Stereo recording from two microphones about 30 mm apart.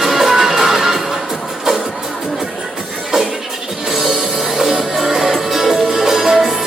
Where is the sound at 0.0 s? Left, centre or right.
Centre.